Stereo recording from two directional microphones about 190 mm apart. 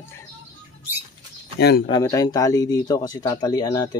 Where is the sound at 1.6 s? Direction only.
60° left (ahead or behind).